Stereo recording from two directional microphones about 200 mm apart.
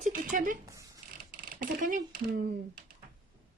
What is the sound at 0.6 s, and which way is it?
Speech, 15° right (ahead or behind).